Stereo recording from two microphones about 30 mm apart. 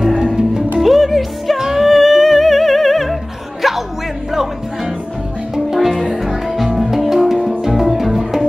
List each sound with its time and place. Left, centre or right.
0.7 s music: centre